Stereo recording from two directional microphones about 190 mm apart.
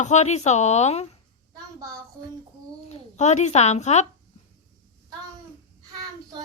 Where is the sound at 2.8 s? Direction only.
35° left (ahead or behind).